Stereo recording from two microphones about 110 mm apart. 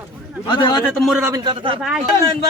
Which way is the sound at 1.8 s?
10° right (ahead or behind).